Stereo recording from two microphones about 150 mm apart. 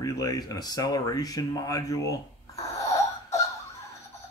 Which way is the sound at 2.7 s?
20° left (ahead or behind).